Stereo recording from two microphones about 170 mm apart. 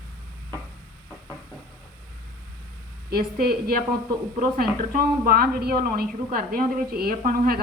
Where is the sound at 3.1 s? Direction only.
65° right (ahead or behind).